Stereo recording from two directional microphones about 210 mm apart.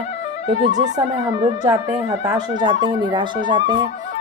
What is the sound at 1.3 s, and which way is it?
Speech, 20° right (ahead or behind).